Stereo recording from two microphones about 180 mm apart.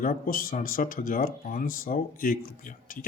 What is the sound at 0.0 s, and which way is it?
Speech, 55° left (ahead or behind).